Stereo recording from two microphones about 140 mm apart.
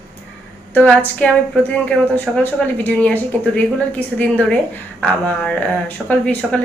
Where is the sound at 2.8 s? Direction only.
10° left (ahead or behind).